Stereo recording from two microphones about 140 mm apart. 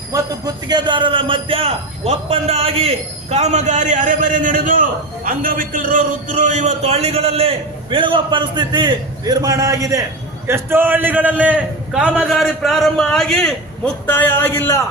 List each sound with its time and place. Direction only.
0.1 s a man's voice: 30° right (ahead or behind); by 14.8 s 20° left (ahead or behind)